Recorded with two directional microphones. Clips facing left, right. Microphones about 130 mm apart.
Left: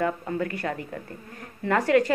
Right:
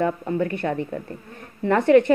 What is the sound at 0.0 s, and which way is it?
A woman's voice, 25° right (ahead or behind).